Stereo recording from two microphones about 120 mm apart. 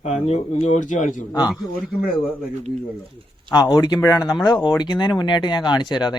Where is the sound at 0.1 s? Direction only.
65° left (ahead or behind); by 1.1 s 90° left.